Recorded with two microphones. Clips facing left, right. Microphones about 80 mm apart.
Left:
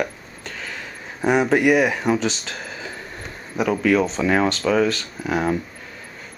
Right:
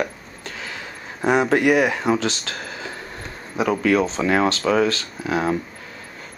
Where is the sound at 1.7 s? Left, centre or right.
Centre.